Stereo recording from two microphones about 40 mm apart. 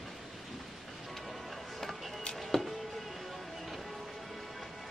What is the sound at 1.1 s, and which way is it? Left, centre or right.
Music, centre.